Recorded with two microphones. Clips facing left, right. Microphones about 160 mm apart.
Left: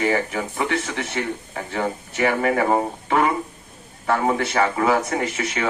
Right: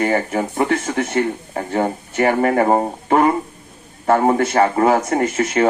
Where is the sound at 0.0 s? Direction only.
45° right (ahead or behind).